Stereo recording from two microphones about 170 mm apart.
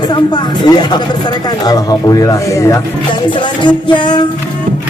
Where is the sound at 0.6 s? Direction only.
25° left (ahead or behind).